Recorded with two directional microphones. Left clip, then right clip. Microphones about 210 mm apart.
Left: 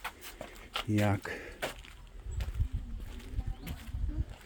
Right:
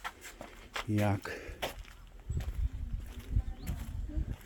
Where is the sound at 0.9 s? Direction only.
5° left (ahead or behind).